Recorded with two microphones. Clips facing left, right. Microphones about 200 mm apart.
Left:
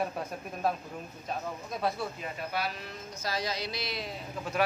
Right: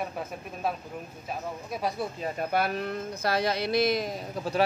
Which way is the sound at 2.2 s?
50° right (ahead or behind).